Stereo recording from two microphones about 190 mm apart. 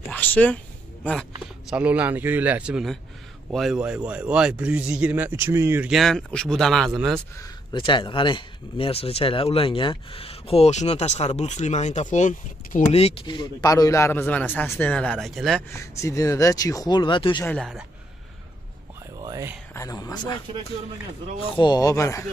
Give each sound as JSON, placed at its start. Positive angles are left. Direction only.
{"t": 0.1, "sound": "speech", "side_deg": 10}
{"t": 1.7, "sound": "a man's voice", "side_deg": -10}
{"t": 5.9, "sound": "a man's voice", "side_deg": 0}
{"t": 7.3, "sound": "speech", "side_deg": 20}
{"t": 15.7, "sound": "speech", "side_deg": 15}
{"t": 17.5, "sound": "a man's voice", "side_deg": 0}
{"t": 19.1, "sound": "whispering", "side_deg": -20}
{"t": 19.7, "sound": "speech", "side_deg": 15}
{"t": 21.4, "sound": "speech", "side_deg": 25}